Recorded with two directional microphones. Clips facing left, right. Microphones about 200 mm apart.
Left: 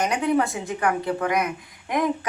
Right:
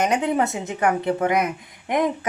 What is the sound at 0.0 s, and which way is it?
A woman's voice, 20° right (ahead or behind).